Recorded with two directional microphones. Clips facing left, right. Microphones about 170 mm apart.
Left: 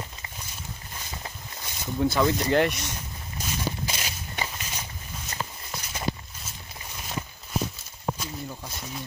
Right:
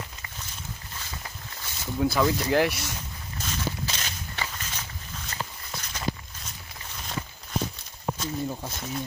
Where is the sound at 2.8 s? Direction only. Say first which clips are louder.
Even; 10° left (ahead or behind).